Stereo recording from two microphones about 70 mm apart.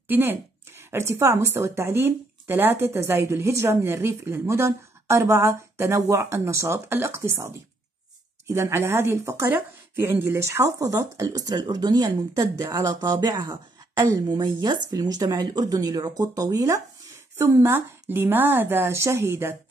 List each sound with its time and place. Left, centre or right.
0.1 s speech: right
9.5 s speech: right
14.0 s speech: right
17.4 s speech: right
18.9 s speech: right